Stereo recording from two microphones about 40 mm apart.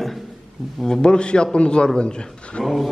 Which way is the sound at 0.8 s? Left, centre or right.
Left.